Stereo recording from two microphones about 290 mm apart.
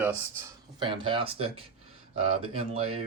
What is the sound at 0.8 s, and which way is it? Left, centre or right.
Speech, centre.